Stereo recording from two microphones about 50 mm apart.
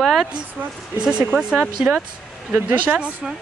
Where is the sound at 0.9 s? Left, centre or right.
Centre.